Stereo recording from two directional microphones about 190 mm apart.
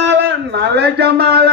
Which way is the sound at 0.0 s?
65° right (ahead or behind).